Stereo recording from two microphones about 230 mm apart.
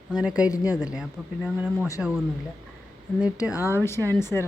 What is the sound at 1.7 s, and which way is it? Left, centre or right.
Speech, centre.